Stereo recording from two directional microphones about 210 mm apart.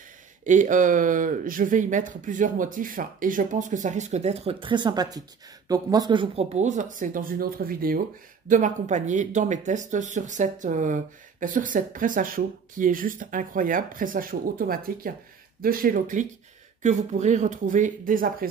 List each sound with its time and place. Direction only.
0.4 s speech: 35° right (ahead or behind)